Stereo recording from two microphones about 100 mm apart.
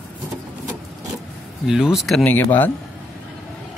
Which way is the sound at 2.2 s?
20° left (ahead or behind).